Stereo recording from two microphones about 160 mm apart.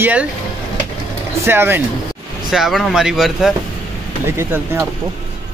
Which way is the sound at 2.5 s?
Centre (ahead or behind).